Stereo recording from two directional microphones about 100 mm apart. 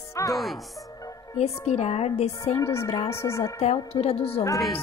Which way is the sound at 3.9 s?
75° left (ahead or behind).